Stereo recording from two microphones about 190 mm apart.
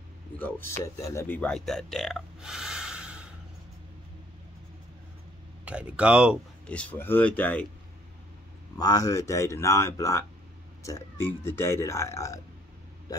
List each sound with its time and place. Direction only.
0.4 s a man's voice: 10° left (ahead or behind)
5.7 s speech: 5° right (ahead or behind)
6.7 s speech: 5° left (ahead or behind)
8.7 s speech: 20° left (ahead or behind)